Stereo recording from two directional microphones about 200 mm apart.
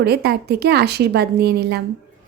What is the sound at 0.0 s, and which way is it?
A woman's voice, 55° right (ahead or behind).